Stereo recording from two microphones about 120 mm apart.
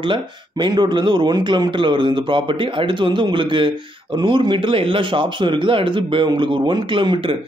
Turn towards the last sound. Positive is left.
turn(degrees=-45)  # may be behind; listen again after turning